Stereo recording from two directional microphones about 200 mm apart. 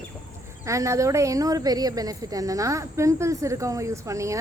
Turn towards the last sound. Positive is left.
turn(degrees=-15)  # may be behind; listen again after turning